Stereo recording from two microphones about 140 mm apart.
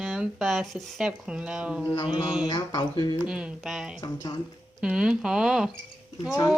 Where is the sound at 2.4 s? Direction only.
30° left (ahead or behind).